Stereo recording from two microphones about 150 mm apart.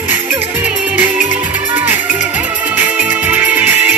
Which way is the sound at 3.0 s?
10° right (ahead or behind).